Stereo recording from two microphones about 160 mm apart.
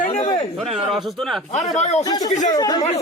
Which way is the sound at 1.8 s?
45° left (ahead or behind).